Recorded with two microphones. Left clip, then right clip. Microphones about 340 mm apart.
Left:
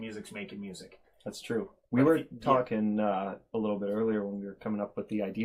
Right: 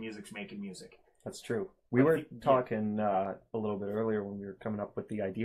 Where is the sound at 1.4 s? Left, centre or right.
Right.